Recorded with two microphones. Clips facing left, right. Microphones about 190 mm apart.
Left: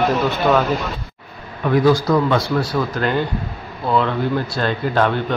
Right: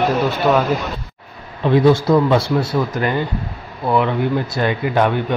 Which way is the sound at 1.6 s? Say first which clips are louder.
Right 2 dB; 25° right (ahead or behind).